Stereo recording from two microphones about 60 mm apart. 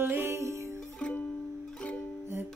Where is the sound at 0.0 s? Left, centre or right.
Right.